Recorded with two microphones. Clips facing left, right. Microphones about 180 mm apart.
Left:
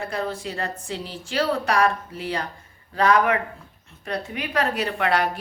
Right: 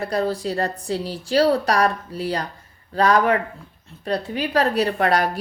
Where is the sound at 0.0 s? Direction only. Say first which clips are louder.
Right 5 dB; 35° right (ahead or behind).